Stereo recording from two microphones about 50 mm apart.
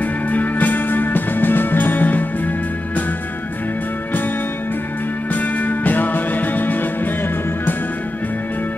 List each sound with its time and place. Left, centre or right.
0.0 s music: left
5.3 s music: left